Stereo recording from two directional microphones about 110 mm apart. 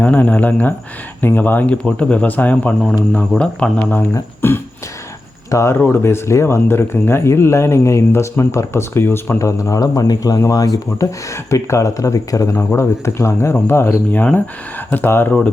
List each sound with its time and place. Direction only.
0.0 s speech: 15° left (ahead or behind)
4.1 s speech: 20° left (ahead or behind)